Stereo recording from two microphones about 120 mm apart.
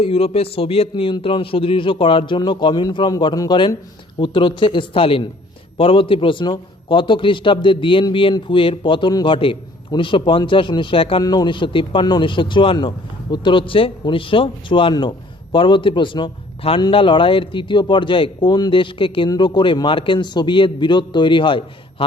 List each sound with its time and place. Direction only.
0.0 s a man's voice: 55° left (ahead or behind)
11.2 s a man's voice: 35° left (ahead or behind)